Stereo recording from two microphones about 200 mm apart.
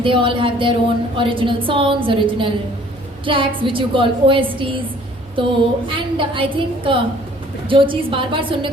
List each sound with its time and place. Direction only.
0.0 s a woman's voice: 25° right (ahead or behind)